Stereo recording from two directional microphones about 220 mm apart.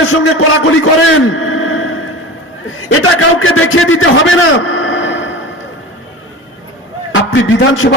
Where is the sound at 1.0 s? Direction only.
70° left (ahead or behind).